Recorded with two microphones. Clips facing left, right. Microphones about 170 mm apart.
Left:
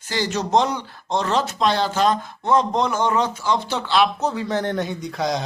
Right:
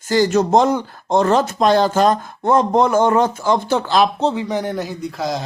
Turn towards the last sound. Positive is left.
turn(degrees=0)  # may be behind; listen again after turning